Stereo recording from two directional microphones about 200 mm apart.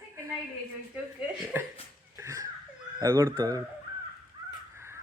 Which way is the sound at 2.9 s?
15° right (ahead or behind).